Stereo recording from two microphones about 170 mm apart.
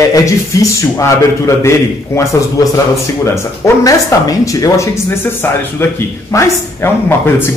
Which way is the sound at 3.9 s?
20° left (ahead or behind).